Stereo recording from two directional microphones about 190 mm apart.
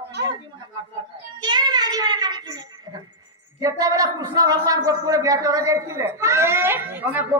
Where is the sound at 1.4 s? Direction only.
25° right (ahead or behind).